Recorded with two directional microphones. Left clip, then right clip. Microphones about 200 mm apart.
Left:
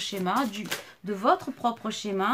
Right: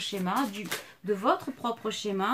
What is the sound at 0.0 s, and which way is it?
Speech, 40° left (ahead or behind).